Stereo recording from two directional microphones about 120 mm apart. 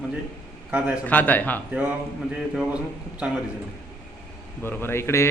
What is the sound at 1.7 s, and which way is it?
A man's voice, 15° right (ahead or behind).